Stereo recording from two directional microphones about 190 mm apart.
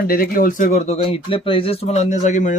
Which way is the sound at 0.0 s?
50° left (ahead or behind).